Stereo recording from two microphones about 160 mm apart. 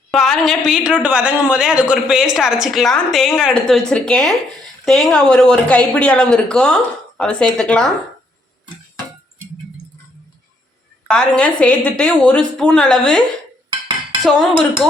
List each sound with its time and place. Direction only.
0.1 s a woman's voice: centre (ahead or behind)
11.1 s a woman's voice: 5° left (ahead or behind)
13.7 s dishes: 25° right (ahead or behind)